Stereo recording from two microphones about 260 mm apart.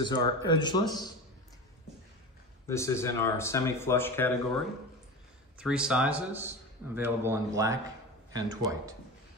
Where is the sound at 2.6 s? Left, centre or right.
Centre.